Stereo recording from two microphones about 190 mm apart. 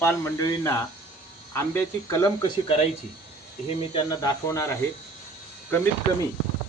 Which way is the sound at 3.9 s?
25° left (ahead or behind).